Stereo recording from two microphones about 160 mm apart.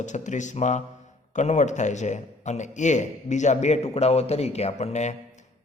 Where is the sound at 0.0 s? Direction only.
50° left (ahead or behind).